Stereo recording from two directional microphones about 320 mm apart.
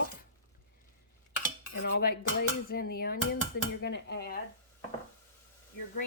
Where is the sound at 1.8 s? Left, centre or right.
Left.